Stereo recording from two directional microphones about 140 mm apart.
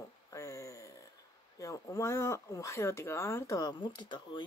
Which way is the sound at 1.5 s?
25° left (ahead or behind).